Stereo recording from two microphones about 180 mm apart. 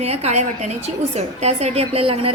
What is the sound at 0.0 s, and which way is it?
A woman's voice, 35° right (ahead or behind).